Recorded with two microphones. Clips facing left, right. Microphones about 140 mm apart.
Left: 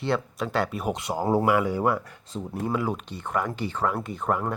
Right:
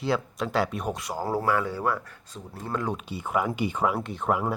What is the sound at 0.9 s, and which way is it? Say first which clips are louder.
Speech: left 4 dB; 25° left (ahead or behind).